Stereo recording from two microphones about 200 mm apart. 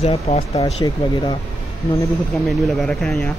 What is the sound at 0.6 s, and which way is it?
Speech, 20° left (ahead or behind).